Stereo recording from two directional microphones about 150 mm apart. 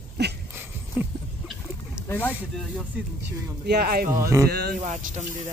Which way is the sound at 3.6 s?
90° right.